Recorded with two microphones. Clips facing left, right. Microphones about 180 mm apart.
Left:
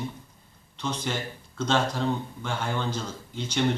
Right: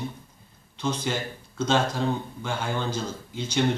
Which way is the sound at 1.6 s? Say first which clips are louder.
Right 1 dB; 5° right (ahead or behind).